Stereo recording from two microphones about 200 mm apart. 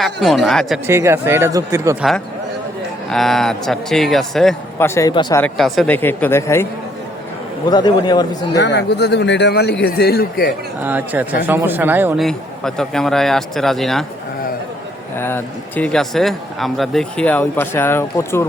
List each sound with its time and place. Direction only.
0.0 s speech: centre (ahead or behind)
0.9 s speech: 15° right (ahead or behind)
2.0 s speech: centre (ahead or behind)
4.9 s speech: 20° left (ahead or behind)
5.4 s speech: centre (ahead or behind)
7.7 s a man's voice: 20° left (ahead or behind)
8.5 s speech: 60° left (ahead or behind)
10.8 s speech: 10° right (ahead or behind)
12.2 s speech: centre (ahead or behind)
15.1 s speech: 10° left (ahead or behind)